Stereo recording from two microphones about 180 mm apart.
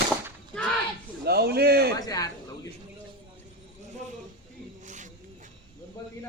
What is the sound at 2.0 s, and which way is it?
Speech, 20° left (ahead or behind).